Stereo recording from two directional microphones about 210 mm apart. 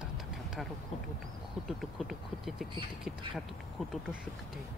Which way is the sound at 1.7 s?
Centre (ahead or behind).